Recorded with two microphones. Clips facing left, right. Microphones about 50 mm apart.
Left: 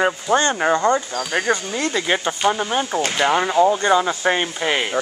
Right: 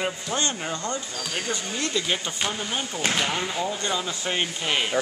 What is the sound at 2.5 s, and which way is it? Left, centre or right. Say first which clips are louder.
Speech: left 13 dB; left.